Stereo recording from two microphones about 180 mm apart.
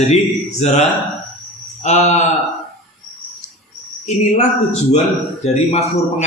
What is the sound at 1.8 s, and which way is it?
Speech, 40° left (ahead or behind).